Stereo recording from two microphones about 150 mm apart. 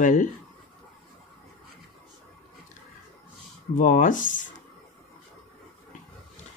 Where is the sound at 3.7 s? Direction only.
65° left (ahead or behind).